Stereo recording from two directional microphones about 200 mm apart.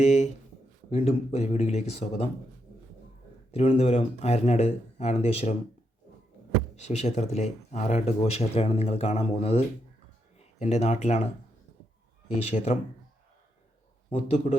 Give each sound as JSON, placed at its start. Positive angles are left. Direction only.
{"t": 0.0, "sound": "speech", "side_deg": 35}
{"t": 3.5, "sound": "speech", "side_deg": 30}
{"t": 6.7, "sound": "speech", "side_deg": 35}
{"t": 12.5, "sound": "speech", "side_deg": 30}
{"t": 14.1, "sound": "speech", "side_deg": 35}